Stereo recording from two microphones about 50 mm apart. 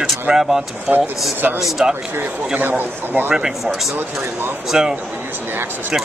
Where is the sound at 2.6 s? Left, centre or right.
Right.